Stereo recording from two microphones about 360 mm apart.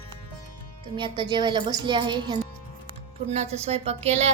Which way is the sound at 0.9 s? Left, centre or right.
Centre.